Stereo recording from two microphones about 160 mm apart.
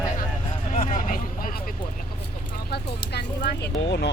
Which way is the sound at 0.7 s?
50° left (ahead or behind).